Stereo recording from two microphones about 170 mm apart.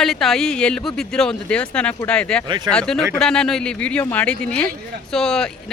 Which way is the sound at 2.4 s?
25° right (ahead or behind).